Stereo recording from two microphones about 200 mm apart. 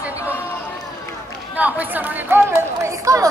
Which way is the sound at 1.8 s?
10° right (ahead or behind).